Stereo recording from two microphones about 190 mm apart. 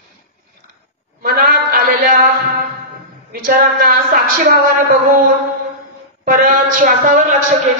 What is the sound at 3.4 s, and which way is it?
A man's voice, 50° right (ahead or behind).